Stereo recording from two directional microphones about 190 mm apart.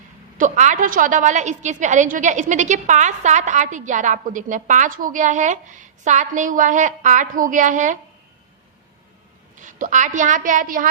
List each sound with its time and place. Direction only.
0.3 s a woman's voice: 40° right (ahead or behind)
9.6 s a woman's voice: 40° right (ahead or behind)